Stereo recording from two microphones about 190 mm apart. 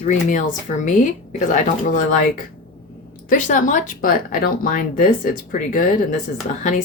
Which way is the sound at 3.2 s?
40° left (ahead or behind).